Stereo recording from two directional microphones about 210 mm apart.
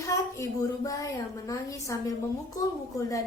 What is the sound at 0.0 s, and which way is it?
A woman's voice, 15° left (ahead or behind).